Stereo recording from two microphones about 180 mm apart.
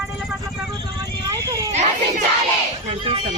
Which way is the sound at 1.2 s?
20° right (ahead or behind).